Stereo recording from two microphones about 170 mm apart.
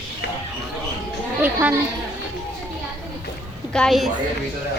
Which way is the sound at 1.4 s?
10° right (ahead or behind).